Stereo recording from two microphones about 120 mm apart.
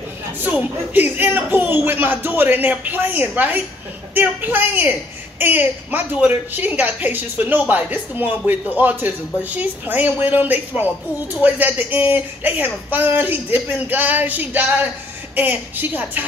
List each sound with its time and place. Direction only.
0.4 s a woman's voice: 15° right (ahead or behind)